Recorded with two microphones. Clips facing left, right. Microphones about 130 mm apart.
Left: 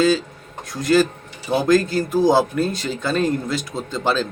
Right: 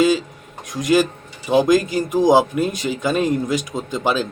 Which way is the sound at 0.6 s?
15° right (ahead or behind).